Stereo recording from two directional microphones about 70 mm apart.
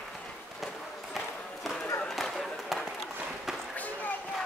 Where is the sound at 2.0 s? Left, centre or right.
Centre.